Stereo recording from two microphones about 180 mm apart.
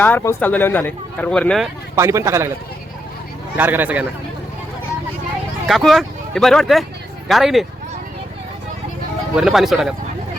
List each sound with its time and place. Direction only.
0.0 s speech: 10° left (ahead or behind)
2.0 s a man's voice: 15° right (ahead or behind)
3.6 s a man's voice: 10° right (ahead or behind)
5.6 s speech: centre (ahead or behind)
9.3 s speech: 5° right (ahead or behind)